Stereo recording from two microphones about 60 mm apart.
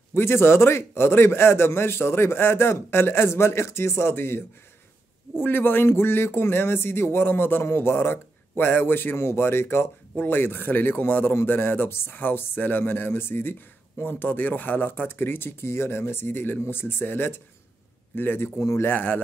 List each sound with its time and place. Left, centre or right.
0.1 s a man's voice: left
18.6 s a man's voice: left
18.9 s speech: left